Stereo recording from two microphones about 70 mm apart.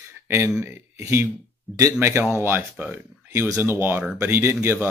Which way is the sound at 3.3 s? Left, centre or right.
Right.